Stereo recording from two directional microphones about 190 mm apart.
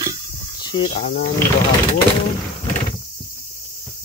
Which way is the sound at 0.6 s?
25° left (ahead or behind).